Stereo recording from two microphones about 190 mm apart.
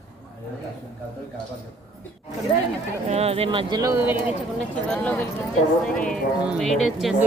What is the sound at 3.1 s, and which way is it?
Speech, 30° right (ahead or behind).